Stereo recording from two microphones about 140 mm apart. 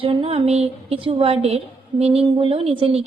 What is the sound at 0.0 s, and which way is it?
A woman's voice, 40° right (ahead or behind).